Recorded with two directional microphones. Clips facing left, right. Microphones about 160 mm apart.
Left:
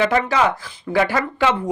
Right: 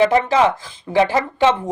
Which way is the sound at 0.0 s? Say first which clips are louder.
Right 3 dB; 30° right (ahead or behind).